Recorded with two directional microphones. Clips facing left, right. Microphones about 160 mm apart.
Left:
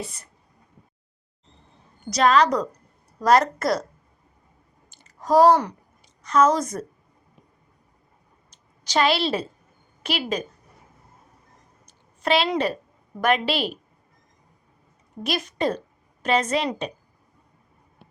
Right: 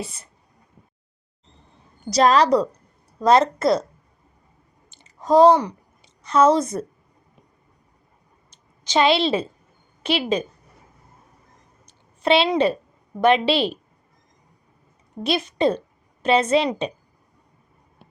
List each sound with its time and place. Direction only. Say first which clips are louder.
0.0 s a woman's voice: right 2 dB; 25° right (ahead or behind)
2.0 s a woman's voice: right 2 dB; 35° right (ahead or behind)
4.9 s a sound: right 3 dB; 20° right (ahead or behind)
6.2 s a woman's voice: right 3 dB; 30° right (ahead or behind)
8.4 s a sound: right 3 dB; 25° right (ahead or behind)
9.1 s a woman's voice: right 4 dB; 25° right (ahead or behind)
11.9 s a sound: right 4 dB; 30° right (ahead or behind)
13.2 s a woman's voice: right 5 dB; 30° right (ahead or behind)
15.2 s a woman's voice: right 5 dB; 25° right (ahead or behind)